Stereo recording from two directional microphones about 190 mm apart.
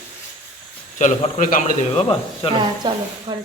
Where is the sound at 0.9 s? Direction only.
40° left (ahead or behind).